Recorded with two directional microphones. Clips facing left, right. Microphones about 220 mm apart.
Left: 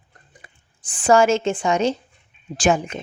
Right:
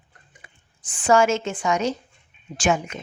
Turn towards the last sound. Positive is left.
turn(degrees=30)  # may be behind; listen again after turning